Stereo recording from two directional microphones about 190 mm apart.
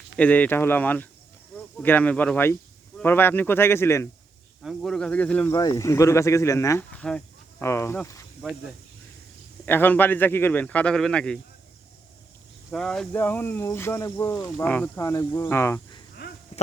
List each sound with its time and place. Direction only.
0.2 s speech: 10° left (ahead or behind)
4.6 s speech: centre (ahead or behind)
5.5 s speech: 20° left (ahead or behind)
9.6 s speech: 10° left (ahead or behind)
12.7 s speech: centre (ahead or behind)